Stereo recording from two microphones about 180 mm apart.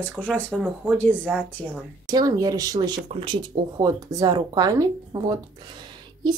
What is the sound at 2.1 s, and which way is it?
Speech, 20° right (ahead or behind).